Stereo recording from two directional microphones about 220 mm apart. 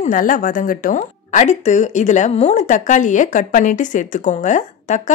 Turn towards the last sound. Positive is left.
turn(degrees=35)  # may be behind; listen again after turning